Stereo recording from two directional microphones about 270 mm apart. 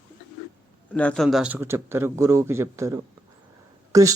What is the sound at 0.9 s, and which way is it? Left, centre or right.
Speech, centre.